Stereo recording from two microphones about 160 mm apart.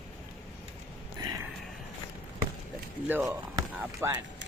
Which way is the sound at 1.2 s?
25° right (ahead or behind).